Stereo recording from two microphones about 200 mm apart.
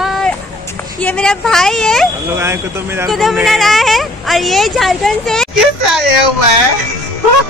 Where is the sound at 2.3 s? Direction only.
15° right (ahead or behind).